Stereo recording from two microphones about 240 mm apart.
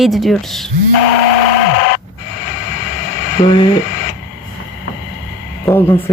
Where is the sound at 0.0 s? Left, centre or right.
Centre.